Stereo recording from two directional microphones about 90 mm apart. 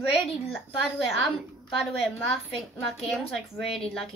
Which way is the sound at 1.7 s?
Centre (ahead or behind).